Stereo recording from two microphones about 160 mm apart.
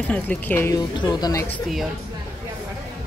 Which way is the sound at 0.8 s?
25° left (ahead or behind).